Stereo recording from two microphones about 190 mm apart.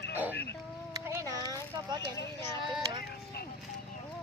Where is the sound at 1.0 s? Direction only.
15° right (ahead or behind).